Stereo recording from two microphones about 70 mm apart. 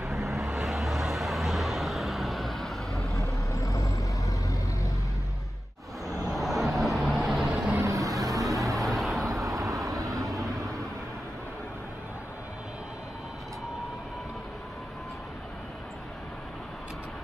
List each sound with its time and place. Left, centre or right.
0.0 s vehicle: centre
3.5 s vehicle: left
6.3 s vehicle: centre
7.8 s vehicle: right
8.7 s vehicle: centre
9.2 s vehicle: right
10.1 s vehicle: centre